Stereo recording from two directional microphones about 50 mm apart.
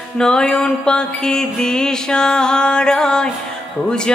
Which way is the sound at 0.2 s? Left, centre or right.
Centre.